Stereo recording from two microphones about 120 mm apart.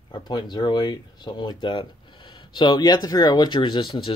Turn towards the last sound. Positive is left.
turn(degrees=45)  # may be behind; listen again after turning